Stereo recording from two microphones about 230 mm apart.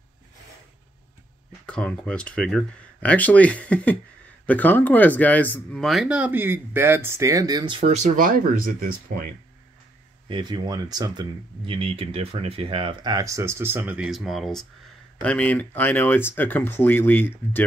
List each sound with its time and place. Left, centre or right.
1.7 s speech: centre; by 9.3 s right
10.2 s speech: centre